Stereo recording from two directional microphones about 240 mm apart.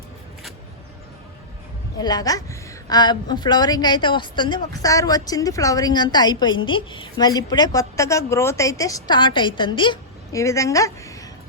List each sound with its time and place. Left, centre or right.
2.0 s a woman's voice: centre